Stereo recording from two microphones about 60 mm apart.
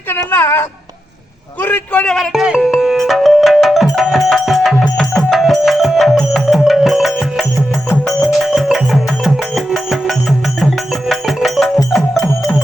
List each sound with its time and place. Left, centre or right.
0.1 s a sound: left
1.6 s a man's voice: left
2.3 s music: centre